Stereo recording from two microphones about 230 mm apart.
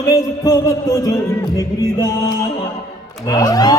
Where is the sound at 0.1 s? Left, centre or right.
Centre.